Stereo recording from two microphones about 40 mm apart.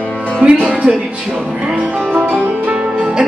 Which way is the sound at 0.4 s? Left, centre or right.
Right.